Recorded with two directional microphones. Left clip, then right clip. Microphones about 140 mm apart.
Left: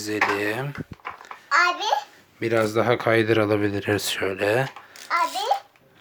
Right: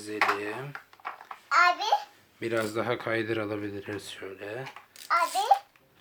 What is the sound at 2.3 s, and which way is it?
Speech, 30° left (ahead or behind).